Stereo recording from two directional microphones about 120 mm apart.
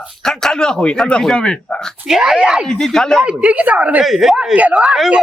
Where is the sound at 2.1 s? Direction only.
5° right (ahead or behind).